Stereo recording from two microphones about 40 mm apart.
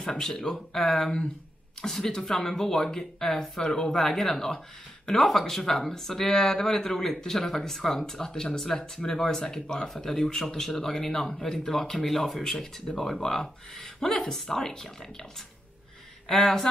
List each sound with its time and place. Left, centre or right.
0.1 s speech: centre